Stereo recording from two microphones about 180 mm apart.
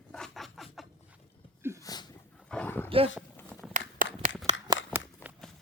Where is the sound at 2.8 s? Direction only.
30° right (ahead or behind).